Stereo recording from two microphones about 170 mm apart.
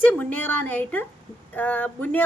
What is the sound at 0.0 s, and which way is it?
A woman's voice, 10° left (ahead or behind).